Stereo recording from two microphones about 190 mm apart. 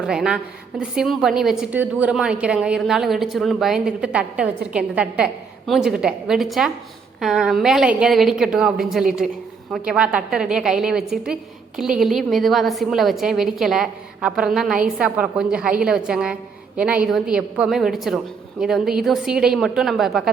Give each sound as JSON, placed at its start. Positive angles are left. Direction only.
{"t": 0.0, "sound": "a woman's voice", "side_deg": -5}